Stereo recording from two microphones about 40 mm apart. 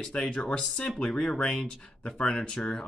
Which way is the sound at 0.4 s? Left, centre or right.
Centre.